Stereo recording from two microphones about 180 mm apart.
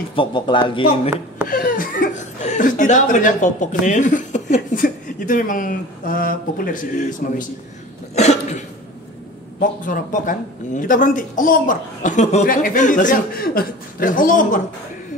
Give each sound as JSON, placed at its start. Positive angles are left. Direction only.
{"t": 0.1, "sound": "speech", "side_deg": 30}
{"t": 1.5, "sound": "speech", "side_deg": 50}
{"t": 8.1, "sound": "cough", "side_deg": 40}
{"t": 9.6, "sound": "speech", "side_deg": 45}